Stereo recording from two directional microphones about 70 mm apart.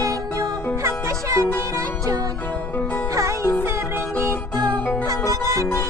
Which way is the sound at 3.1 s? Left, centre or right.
Right.